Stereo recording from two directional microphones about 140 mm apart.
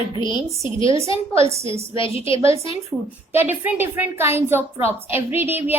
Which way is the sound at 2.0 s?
40° left (ahead or behind).